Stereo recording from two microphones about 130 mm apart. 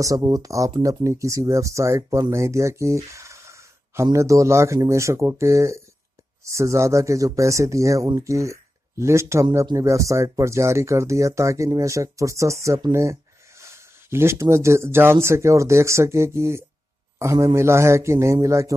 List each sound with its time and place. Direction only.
0.0 s speech: 30° right (ahead or behind)